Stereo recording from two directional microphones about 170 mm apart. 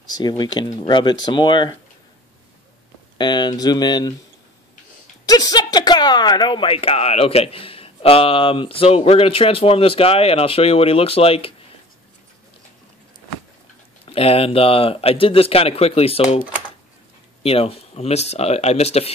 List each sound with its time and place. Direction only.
0.1 s speech: 25° left (ahead or behind)
3.2 s speech: 25° left (ahead or behind)
5.2 s speech: 20° left (ahead or behind)
14.0 s speech: 35° left (ahead or behind)